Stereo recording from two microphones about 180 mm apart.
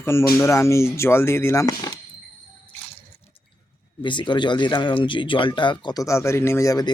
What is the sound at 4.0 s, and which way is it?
Speech, 25° left (ahead or behind).